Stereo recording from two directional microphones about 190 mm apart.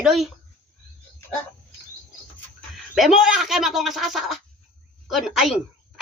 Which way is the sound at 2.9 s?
Centre (ahead or behind).